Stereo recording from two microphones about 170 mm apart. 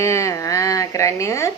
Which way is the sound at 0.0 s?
15° left (ahead or behind).